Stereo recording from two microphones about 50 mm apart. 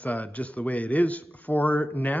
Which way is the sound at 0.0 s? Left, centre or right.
Left.